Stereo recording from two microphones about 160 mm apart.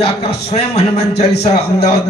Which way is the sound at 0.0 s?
40° left (ahead or behind).